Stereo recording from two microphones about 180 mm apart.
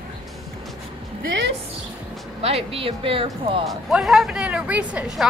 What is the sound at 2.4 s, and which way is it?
Speech, 35° right (ahead or behind).